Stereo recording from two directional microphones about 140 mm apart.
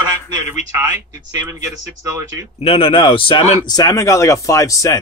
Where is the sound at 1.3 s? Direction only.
25° right (ahead or behind).